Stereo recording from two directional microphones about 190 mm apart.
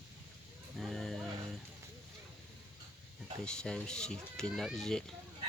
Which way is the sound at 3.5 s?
5° left (ahead or behind).